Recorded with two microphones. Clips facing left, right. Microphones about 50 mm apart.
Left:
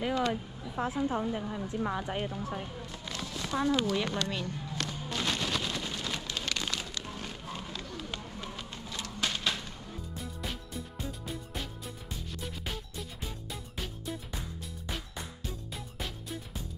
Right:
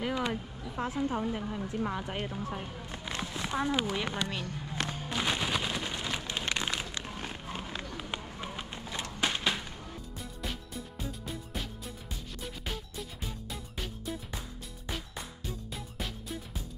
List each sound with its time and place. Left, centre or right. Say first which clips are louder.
0.1 s a sound: left 5 dB; centre
0.7 s a woman's voice: left 1 dB; centre
1.2 s a woman's voice: even; centre
2.2 s a woman's voice: left 1 dB; centre
2.9 s a sound: right 2 dB; right
10.1 s music: even; centre
12.6 s music: even; centre
15.4 s music: right 1 dB; centre